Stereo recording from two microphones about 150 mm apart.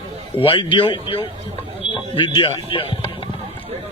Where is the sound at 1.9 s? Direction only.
35° left (ahead or behind).